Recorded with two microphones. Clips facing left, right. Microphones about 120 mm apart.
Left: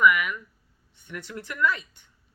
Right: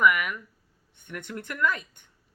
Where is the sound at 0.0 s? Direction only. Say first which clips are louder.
Left 2 dB; 45° right (ahead or behind).